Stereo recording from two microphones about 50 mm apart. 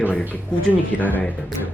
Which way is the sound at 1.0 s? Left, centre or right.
Left.